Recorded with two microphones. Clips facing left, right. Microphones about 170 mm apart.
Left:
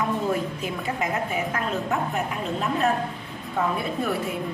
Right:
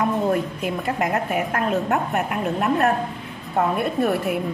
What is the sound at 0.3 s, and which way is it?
A woman's voice, 60° right (ahead or behind).